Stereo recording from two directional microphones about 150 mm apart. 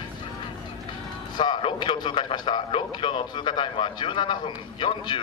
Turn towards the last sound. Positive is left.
turn(degrees=35)  # may be behind; listen again after turning